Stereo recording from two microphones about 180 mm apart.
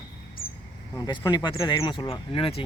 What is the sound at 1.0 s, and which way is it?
Speech, 20° left (ahead or behind).